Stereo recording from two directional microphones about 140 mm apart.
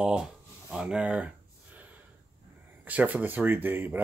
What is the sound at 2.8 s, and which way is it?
Speech, 10° right (ahead or behind).